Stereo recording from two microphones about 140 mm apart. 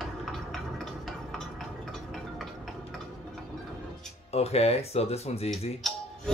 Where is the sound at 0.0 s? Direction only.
Centre (ahead or behind).